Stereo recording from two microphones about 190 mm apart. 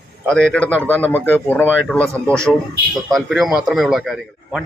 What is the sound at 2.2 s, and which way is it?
Speech, 15° right (ahead or behind).